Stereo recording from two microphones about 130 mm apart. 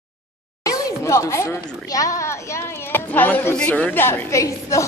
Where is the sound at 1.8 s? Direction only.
25° left (ahead or behind).